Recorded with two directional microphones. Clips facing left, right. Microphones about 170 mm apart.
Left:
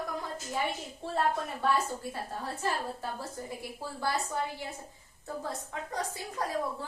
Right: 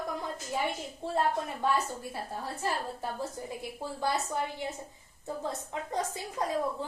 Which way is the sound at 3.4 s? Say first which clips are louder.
Right 1 dB; 20° right (ahead or behind).